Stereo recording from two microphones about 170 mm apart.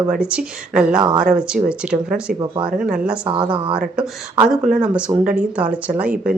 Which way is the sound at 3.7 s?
5° right (ahead or behind).